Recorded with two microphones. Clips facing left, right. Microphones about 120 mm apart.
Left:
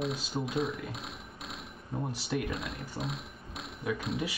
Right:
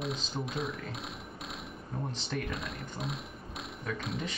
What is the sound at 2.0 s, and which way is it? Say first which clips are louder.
Speech: left 3 dB; 10° left (ahead or behind).